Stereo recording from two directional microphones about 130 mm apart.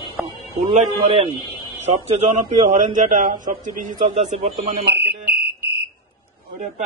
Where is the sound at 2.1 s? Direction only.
65° right (ahead or behind).